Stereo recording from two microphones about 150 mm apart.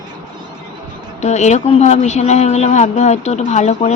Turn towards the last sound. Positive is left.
turn(degrees=50)  # may be behind; listen again after turning